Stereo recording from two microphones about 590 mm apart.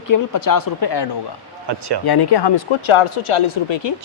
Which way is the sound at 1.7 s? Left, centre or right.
Right.